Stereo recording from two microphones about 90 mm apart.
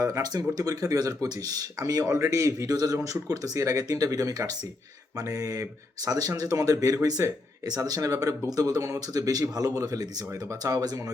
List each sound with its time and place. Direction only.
0.0 s speech: 40° right (ahead or behind)